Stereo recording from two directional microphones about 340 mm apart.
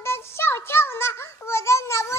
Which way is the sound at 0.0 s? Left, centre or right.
Centre.